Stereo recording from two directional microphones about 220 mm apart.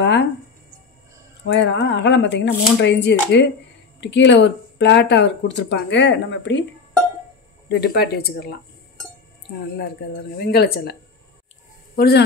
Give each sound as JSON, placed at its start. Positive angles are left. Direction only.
{"t": 0.0, "sound": "a sound", "side_deg": 50}
{"t": 1.5, "sound": "speech", "side_deg": 55}
{"t": 7.7, "sound": "speech", "side_deg": 45}
{"t": 10.3, "sound": "speech", "side_deg": 45}